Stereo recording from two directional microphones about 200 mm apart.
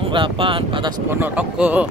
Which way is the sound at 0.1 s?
25° right (ahead or behind).